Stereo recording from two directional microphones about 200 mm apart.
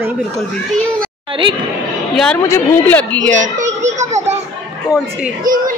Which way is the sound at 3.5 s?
35° right (ahead or behind).